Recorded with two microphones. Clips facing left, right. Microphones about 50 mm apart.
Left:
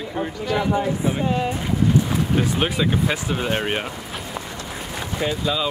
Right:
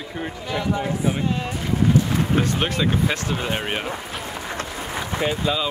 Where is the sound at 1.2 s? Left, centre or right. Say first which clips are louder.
Left 2 dB; centre.